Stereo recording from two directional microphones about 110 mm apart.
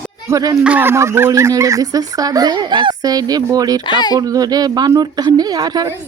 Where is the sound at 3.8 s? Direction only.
40° left (ahead or behind).